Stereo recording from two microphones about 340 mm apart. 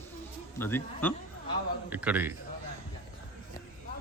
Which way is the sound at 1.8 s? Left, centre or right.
Centre.